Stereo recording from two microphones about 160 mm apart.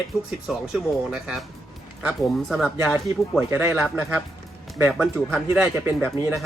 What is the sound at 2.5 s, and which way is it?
Speech, centre (ahead or behind).